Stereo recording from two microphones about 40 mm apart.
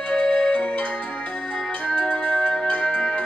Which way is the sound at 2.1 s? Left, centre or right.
Left.